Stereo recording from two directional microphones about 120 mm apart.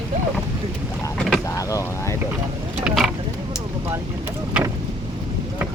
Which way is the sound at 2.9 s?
10° right (ahead or behind).